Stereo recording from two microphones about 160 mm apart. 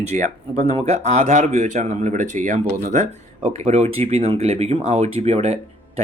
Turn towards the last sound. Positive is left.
turn(degrees=-40)  # may be behind; listen again after turning